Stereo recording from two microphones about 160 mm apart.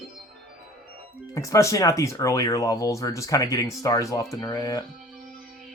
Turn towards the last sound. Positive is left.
turn(degrees=20)  # may be behind; listen again after turning